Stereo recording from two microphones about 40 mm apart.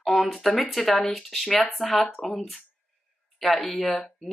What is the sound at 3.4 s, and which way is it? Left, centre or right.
Speech, centre.